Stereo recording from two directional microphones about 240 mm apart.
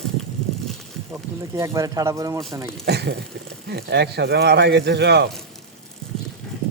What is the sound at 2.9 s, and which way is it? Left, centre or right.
Speech, right.